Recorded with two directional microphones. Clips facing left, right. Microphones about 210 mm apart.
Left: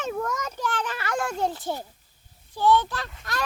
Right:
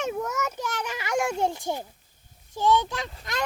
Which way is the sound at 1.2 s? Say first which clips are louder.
Right 1 dB; 20° right (ahead or behind).